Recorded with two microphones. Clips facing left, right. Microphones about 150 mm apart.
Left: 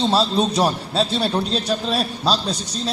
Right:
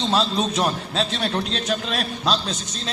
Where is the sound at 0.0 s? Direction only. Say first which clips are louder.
Left 3 dB; 30° left (ahead or behind).